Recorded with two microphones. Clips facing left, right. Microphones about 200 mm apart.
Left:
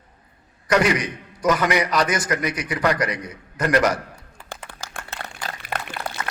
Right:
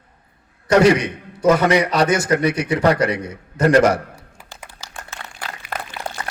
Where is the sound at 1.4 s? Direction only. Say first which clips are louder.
Right 5 dB; 25° right (ahead or behind).